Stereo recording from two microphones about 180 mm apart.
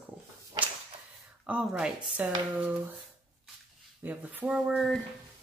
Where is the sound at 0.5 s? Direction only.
25° right (ahead or behind).